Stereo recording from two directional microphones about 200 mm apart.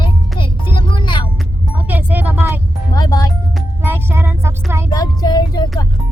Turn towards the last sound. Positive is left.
turn(degrees=20)  # may be behind; listen again after turning